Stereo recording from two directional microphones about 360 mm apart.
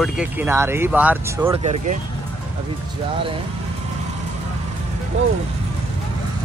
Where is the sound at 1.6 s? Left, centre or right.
Centre.